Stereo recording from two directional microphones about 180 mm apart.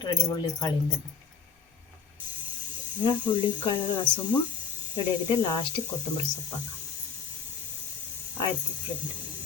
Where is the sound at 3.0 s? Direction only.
25° left (ahead or behind).